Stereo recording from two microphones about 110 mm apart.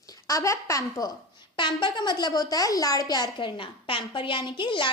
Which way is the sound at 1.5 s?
45° left (ahead or behind).